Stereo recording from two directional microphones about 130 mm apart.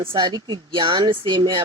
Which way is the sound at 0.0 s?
40° right (ahead or behind).